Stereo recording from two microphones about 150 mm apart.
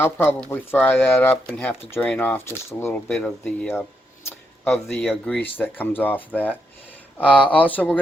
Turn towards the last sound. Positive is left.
turn(degrees=10)  # may be behind; listen again after turning